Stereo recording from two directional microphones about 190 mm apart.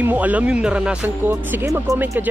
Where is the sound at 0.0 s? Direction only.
10° right (ahead or behind).